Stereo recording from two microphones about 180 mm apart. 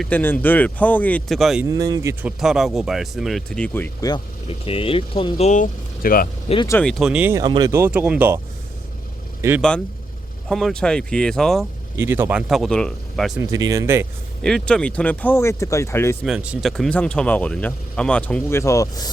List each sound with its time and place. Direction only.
0.0 s speech: 10° left (ahead or behind)
1.6 s speech: 20° right (ahead or behind)
2.4 s speech: centre (ahead or behind)
4.0 s speech: 25° left (ahead or behind); by 6.2 s 50° left (ahead or behind)
6.7 s speech: 10° left (ahead or behind)
7.0 s speech: 5° right (ahead or behind)
9.6 s speech: 5° left (ahead or behind)
11.9 s speech: 15° right (ahead or behind)
13.4 s speech: 20° right (ahead or behind)
14.4 s speech: 5° left (ahead or behind)
16.2 s speech: 5° right (ahead or behind); by 19.1 s 20° left (ahead or behind)